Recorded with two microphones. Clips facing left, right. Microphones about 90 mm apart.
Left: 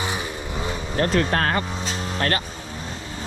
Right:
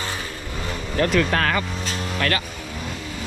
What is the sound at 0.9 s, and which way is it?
Speech, 35° left (ahead or behind).